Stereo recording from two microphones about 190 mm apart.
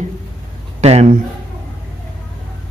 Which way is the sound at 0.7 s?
35° right (ahead or behind).